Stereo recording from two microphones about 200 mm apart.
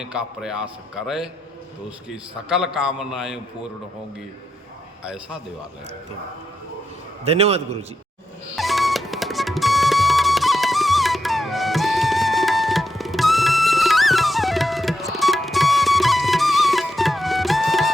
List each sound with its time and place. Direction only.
0.0 s a man's voice: 5° right (ahead or behind)
5.0 s a man's voice: 5° right (ahead or behind)
7.3 s a man's voice: 30° right (ahead or behind)
8.5 s music: centre (ahead or behind)